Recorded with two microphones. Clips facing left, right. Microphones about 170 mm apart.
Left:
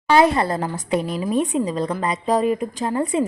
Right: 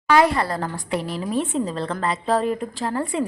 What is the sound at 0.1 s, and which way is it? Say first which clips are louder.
A woman's voice: left 2 dB; 25° left (ahead or behind).